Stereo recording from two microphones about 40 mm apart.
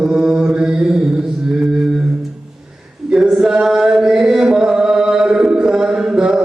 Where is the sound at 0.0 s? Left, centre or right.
Centre.